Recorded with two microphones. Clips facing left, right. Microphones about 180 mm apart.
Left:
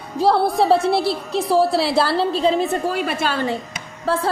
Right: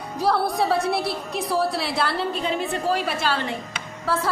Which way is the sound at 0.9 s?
30° left (ahead or behind).